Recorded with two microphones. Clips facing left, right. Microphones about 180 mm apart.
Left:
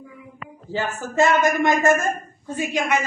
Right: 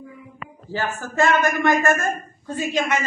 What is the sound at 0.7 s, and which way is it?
A woman's voice, 20° left (ahead or behind).